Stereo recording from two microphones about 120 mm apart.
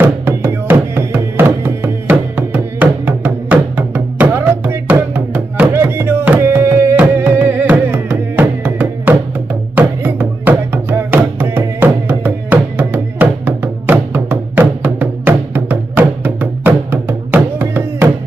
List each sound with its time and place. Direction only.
0.0 s music: 15° right (ahead or behind)